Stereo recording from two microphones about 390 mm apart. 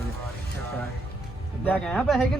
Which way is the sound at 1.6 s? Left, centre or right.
Centre.